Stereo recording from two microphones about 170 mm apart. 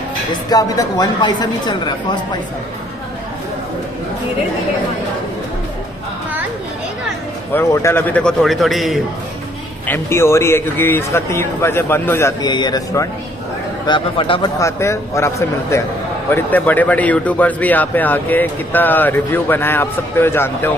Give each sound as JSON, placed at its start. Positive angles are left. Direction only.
{"t": 0.3, "sound": "speech", "side_deg": 20}
{"t": 7.5, "sound": "a man's voice", "side_deg": 15}
{"t": 9.8, "sound": "a man's voice", "side_deg": 15}
{"t": 14.6, "sound": "a man's voice", "side_deg": 15}